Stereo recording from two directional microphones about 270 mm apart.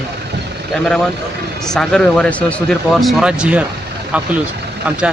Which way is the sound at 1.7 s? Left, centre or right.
Centre.